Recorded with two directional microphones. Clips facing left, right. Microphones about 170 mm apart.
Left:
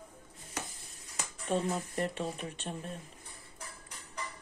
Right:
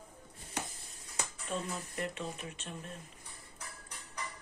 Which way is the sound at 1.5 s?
40° left (ahead or behind).